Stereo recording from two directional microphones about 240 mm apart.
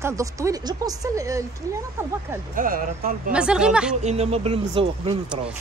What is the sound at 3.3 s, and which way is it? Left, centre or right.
Speech, centre.